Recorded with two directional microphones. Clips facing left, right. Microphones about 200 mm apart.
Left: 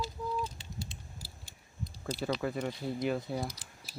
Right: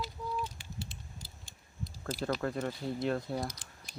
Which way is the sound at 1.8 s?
Centre (ahead or behind).